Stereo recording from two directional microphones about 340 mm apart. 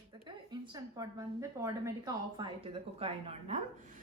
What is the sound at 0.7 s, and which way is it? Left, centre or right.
A woman's voice, centre.